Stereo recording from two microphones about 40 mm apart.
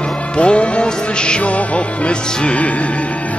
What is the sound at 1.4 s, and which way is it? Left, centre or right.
Music, left.